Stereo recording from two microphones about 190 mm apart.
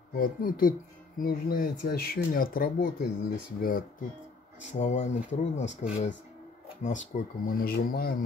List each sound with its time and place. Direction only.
0.2 s speech: 50° left (ahead or behind)
4.7 s speech: 40° left (ahead or behind)